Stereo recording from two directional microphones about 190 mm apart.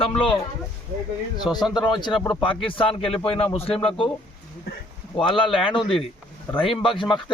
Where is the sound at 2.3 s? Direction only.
25° left (ahead or behind).